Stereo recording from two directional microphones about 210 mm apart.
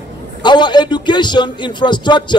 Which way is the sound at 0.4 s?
20° left (ahead or behind).